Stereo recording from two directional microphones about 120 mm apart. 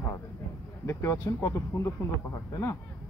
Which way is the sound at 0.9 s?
25° left (ahead or behind).